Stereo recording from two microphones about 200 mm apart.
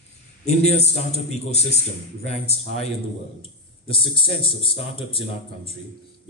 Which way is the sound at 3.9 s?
25° left (ahead or behind).